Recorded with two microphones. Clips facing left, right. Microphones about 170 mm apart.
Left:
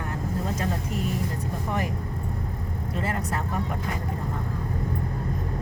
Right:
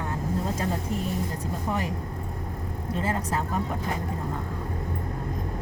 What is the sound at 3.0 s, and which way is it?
Speech, 25° right (ahead or behind).